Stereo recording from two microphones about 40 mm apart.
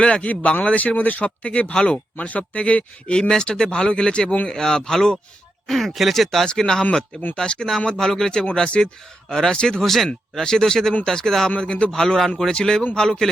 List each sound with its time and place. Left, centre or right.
0.0 s speech: left
1.2 s speech: left
2.1 s speech: left
3.2 s speech: centre
6.4 s speech: centre
9.8 s speech: centre